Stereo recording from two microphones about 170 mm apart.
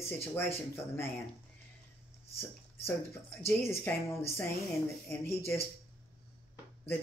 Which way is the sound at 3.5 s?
15° left (ahead or behind).